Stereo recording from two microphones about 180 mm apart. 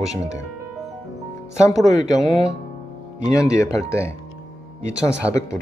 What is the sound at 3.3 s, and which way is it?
Speech, 15° left (ahead or behind).